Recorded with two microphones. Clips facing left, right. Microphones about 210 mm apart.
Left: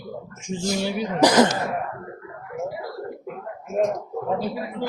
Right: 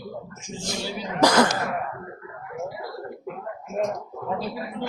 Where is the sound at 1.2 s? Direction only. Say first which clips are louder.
Left 2 dB; 20° left (ahead or behind).